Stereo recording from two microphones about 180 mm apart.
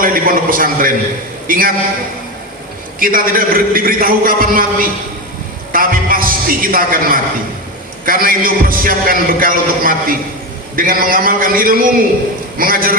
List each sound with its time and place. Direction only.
0.0 s a man's voice: 50° right (ahead or behind)
3.0 s a man's voice: 50° right (ahead or behind)